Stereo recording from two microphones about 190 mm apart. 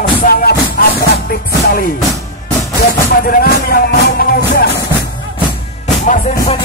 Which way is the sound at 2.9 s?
50° left (ahead or behind).